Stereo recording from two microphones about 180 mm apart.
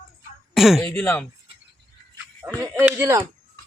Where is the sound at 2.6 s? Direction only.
15° right (ahead or behind).